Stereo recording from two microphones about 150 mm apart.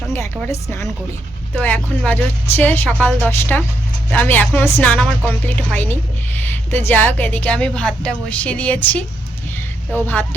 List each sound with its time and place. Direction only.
0.1 s a woman's voice: 15° left (ahead or behind)